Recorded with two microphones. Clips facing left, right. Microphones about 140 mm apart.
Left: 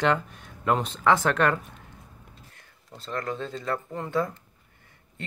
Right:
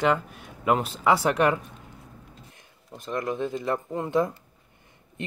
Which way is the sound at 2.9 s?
15° right (ahead or behind).